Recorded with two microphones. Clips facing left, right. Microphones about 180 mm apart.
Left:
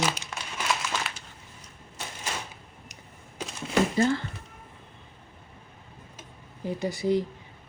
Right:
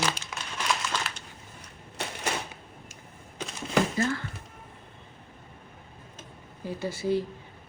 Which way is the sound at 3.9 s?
25° left (ahead or behind).